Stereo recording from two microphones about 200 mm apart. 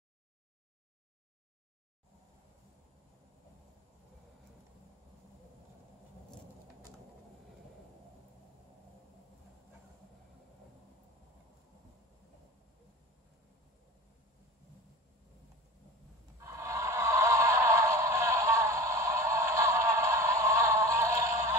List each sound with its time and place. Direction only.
16.3 s music: 15° right (ahead or behind)